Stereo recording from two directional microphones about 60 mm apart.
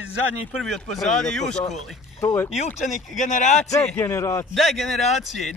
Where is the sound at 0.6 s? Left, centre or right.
Centre.